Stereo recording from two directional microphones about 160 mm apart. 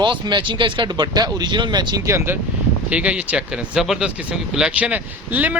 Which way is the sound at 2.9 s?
5° right (ahead or behind).